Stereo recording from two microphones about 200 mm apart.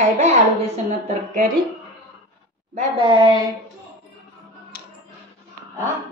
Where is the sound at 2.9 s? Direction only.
25° right (ahead or behind).